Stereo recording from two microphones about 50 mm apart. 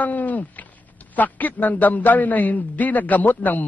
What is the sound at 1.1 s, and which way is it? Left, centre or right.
A man's voice, left.